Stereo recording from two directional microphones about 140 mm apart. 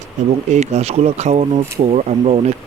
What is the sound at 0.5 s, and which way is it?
Speech, 55° right (ahead or behind).